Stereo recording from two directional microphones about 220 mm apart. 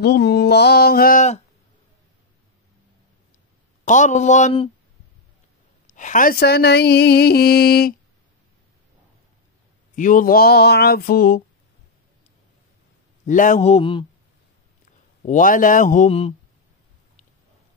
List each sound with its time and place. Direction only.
0.0 s speech: 45° left (ahead or behind)
3.8 s a man's voice: 35° left (ahead or behind)
5.9 s speech: 35° left (ahead or behind)
9.9 s speech: 35° left (ahead or behind)
13.3 s speech: 35° left (ahead or behind)
15.2 s a man's voice: 35° left (ahead or behind)